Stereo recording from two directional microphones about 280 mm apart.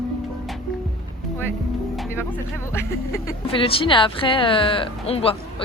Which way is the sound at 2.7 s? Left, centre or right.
Centre.